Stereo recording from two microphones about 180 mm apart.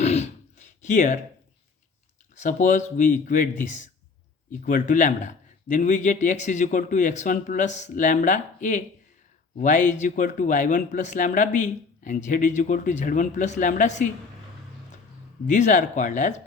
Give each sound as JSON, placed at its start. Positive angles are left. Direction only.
{"t": 0.0, "sound": "throat clearing", "side_deg": 35}
{"t": 2.4, "sound": "speech", "side_deg": 45}
{"t": 15.4, "sound": "speech", "side_deg": 45}